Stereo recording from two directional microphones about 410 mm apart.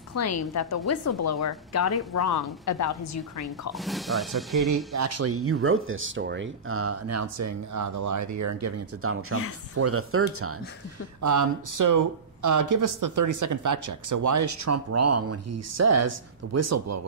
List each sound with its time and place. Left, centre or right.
0.2 s speech: left
3.7 s speech: centre
4.6 s speech: right
11.1 s speech: right